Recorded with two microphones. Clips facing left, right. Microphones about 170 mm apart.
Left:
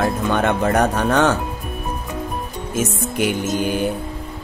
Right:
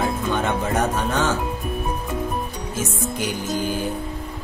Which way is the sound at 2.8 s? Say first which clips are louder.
Left 5 dB; 65° left (ahead or behind).